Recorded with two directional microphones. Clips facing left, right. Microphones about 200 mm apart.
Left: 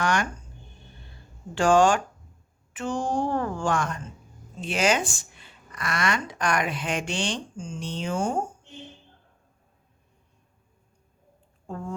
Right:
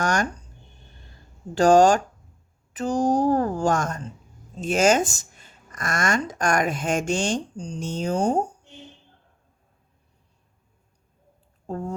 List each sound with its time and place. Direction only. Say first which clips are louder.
0.0 s speech: right 2 dB; 45° right (ahead or behind)
1.5 s speech: right 4 dB; 40° right (ahead or behind)
11.7 s a sound: right 4 dB; 40° right (ahead or behind)